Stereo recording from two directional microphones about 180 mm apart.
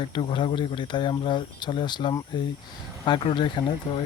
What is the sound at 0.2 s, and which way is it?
Speech, 30° left (ahead or behind).